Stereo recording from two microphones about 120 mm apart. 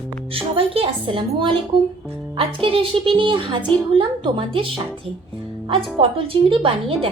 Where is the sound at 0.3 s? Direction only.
50° right (ahead or behind).